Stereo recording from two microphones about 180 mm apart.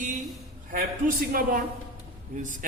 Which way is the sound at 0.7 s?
50° right (ahead or behind).